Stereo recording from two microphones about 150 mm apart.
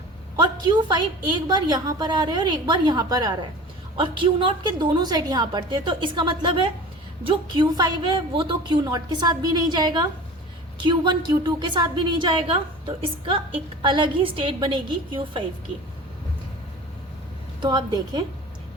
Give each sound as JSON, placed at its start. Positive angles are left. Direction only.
{"t": 0.3, "sound": "a woman's voice", "side_deg": -30}
{"t": 17.6, "sound": "a woman's voice", "side_deg": -30}